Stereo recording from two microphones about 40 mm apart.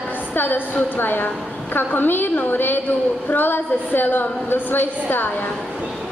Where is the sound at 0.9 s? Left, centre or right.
Left.